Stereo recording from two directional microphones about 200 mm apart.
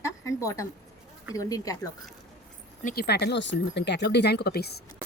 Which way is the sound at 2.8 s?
50° left (ahead or behind).